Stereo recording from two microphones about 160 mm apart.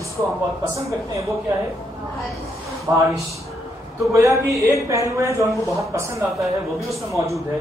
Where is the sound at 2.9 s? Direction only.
20° right (ahead or behind).